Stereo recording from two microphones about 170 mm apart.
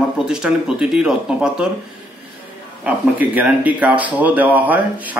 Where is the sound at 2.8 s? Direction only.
10° right (ahead or behind).